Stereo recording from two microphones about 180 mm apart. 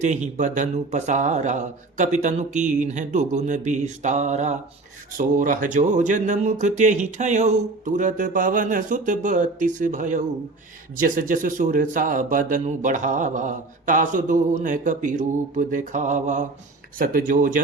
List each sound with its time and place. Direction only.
0.0 s speech: 40° right (ahead or behind)